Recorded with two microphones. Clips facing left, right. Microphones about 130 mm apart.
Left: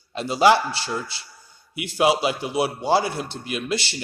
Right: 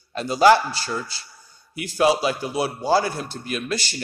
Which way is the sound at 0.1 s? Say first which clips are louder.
Right 2 dB; 25° left (ahead or behind).